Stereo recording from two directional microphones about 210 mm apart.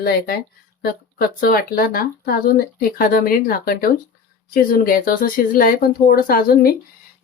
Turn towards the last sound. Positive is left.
turn(degrees=45)  # may be behind; listen again after turning